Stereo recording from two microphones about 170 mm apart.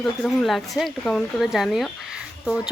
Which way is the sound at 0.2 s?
Centre (ahead or behind).